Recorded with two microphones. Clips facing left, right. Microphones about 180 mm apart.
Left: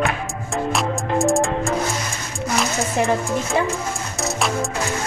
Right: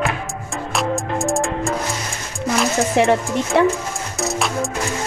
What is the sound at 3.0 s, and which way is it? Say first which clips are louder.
Speech: right 3 dB; 75° right (ahead or behind).